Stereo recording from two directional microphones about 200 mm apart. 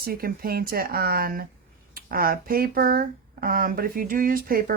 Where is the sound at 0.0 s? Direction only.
50° right (ahead or behind).